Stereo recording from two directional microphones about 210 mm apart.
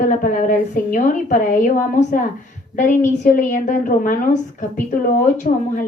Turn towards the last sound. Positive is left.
turn(degrees=40)  # may be behind; listen again after turning